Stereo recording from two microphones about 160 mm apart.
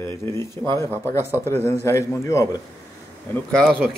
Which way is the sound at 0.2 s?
15° left (ahead or behind).